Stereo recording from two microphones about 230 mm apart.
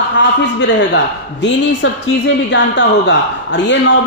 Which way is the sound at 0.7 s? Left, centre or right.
Left.